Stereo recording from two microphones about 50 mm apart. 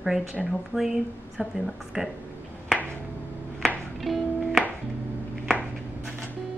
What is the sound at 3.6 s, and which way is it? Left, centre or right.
Music, centre.